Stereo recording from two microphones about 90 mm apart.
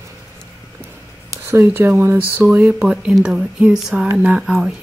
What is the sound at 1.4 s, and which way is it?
Speech, 25° right (ahead or behind).